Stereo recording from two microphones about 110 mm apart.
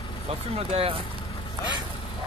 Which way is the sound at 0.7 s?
60° right (ahead or behind).